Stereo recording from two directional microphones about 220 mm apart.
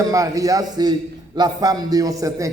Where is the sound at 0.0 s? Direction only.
15° right (ahead or behind).